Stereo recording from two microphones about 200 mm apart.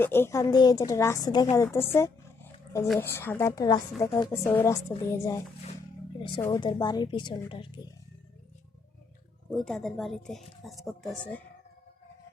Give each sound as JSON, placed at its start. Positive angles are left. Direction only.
{"t": 0.0, "sound": "a woman's voice", "side_deg": 10}
{"t": 1.5, "sound": "dog", "side_deg": 15}
{"t": 3.0, "sound": "a woman's voice", "side_deg": 10}
{"t": 6.4, "sound": "a woman's voice", "side_deg": 20}
{"t": 9.5, "sound": "speech", "side_deg": 0}